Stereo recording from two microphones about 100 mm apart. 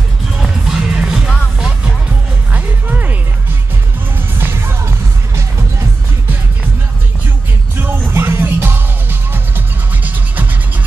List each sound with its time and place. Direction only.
0.7 s music: 5° right (ahead or behind)
2.5 s music: 15° right (ahead or behind)
4.4 s music: 25° right (ahead or behind)
7.8 s music: 25° right (ahead or behind)
10.0 s music: 15° right (ahead or behind)